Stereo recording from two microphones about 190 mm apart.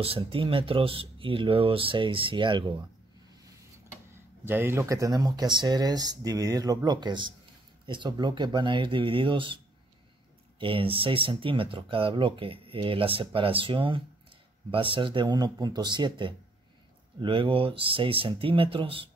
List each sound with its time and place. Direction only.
0.0 s speech: 30° right (ahead or behind)
4.1 s speech: 10° right (ahead or behind)
10.6 s speech: 25° right (ahead or behind)